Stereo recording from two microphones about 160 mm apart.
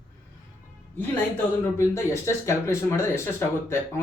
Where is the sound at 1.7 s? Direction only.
15° left (ahead or behind).